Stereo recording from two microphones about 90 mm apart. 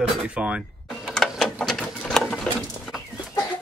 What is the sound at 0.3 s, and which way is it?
Speech, 15° right (ahead or behind).